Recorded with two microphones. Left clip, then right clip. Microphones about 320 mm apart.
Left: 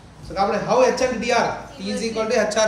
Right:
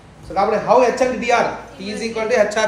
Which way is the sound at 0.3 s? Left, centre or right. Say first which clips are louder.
Right 5 dB; centre.